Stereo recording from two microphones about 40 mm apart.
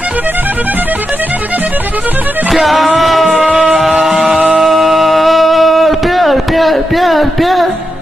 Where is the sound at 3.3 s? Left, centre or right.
Right.